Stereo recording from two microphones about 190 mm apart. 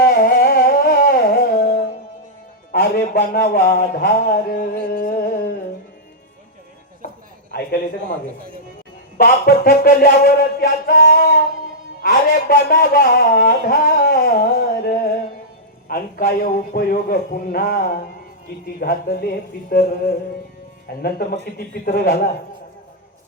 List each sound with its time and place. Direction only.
0.0 s music: 50° left (ahead or behind)
2.7 s a man's voice: 50° left (ahead or behind)
4.9 s music: 55° left (ahead or behind)
7.5 s a man's voice: 55° left (ahead or behind)
9.1 s a man's voice: 55° left (ahead or behind)